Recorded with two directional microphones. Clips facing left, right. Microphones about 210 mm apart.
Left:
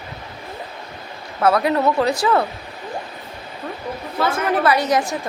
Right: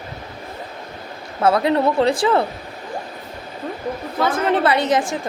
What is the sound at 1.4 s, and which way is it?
A woman's voice, 25° right (ahead or behind).